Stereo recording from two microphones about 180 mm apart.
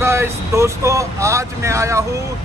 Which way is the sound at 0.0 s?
15° right (ahead or behind).